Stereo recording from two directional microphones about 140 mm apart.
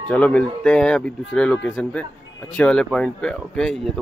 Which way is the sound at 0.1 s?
10° left (ahead or behind).